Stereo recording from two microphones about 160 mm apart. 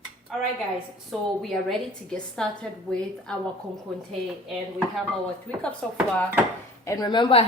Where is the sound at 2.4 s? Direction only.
5° left (ahead or behind).